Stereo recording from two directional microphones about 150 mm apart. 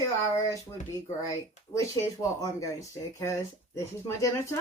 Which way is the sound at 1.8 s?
20° left (ahead or behind).